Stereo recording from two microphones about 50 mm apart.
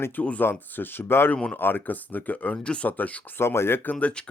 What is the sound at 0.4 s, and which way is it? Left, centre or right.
Speech, left.